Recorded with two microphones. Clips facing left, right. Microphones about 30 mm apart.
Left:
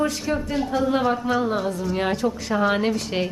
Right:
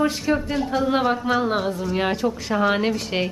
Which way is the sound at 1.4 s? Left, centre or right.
Right.